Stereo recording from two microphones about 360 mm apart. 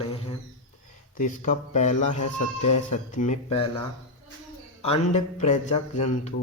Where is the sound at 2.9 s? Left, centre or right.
Centre.